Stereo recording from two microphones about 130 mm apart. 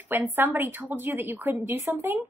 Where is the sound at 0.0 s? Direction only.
15° right (ahead or behind).